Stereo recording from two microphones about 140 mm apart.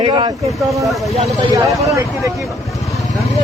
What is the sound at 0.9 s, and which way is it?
Speech, centre (ahead or behind).